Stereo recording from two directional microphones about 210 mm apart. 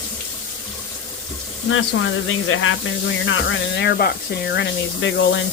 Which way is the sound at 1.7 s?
70° left (ahead or behind).